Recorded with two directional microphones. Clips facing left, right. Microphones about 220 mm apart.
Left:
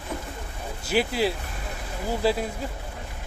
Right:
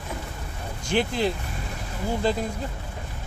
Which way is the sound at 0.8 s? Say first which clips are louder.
Even; 5° left (ahead or behind).